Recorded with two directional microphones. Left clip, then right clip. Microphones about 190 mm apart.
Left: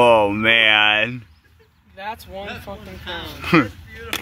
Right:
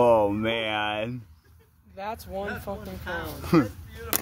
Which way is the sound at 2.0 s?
45° right (ahead or behind).